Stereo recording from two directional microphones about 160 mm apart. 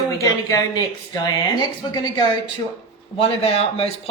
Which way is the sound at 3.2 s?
40° left (ahead or behind).